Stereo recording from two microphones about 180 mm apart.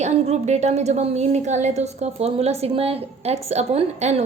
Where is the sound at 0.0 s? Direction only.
40° right (ahead or behind).